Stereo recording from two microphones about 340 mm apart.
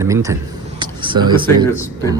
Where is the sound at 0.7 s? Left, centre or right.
Centre.